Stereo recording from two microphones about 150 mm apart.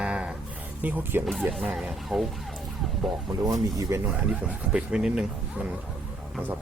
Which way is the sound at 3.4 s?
25° right (ahead or behind).